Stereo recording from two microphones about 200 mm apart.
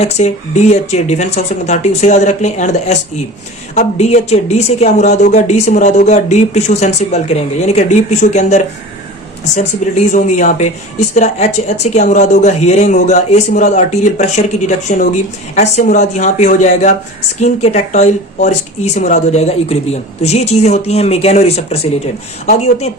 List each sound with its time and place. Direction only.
0.0 s speech: 35° left (ahead or behind)